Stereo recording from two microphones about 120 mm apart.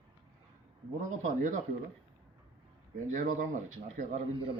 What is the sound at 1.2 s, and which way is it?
Speech, 90° right.